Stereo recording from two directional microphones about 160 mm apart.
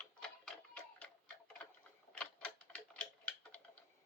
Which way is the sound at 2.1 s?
10° left (ahead or behind).